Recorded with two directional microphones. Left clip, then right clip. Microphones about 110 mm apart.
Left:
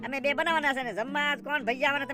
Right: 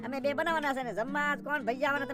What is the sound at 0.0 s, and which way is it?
Speech, 5° left (ahead or behind).